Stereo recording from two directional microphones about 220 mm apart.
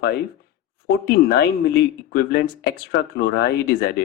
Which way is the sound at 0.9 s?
50° left (ahead or behind).